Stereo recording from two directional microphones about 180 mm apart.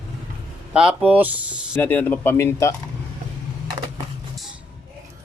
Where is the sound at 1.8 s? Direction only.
10° left (ahead or behind).